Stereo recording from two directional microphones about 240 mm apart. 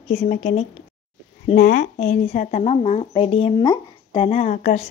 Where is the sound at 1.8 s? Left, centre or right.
Left.